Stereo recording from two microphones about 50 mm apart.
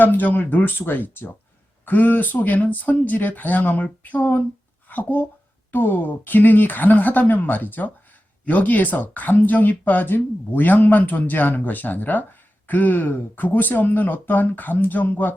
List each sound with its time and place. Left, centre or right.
0.0 s speech: left